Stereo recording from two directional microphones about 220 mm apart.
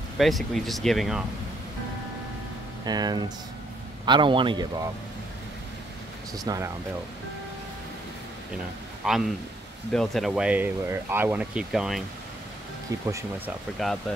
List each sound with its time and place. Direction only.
0.2 s speech: centre (ahead or behind)
2.8 s a man's voice: 20° right (ahead or behind)
6.3 s speech: 15° right (ahead or behind)
9.0 s a man's voice: centre (ahead or behind)
13.8 s speech: centre (ahead or behind)